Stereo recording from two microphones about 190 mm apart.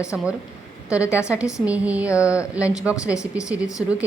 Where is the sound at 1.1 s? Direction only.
15° left (ahead or behind).